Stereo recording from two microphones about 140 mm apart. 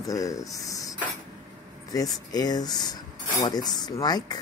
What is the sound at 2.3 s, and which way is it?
Speech, 30° left (ahead or behind).